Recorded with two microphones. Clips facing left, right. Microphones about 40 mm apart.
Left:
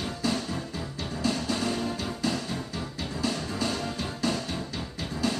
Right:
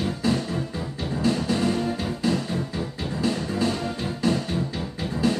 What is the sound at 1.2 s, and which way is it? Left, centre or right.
Music, centre.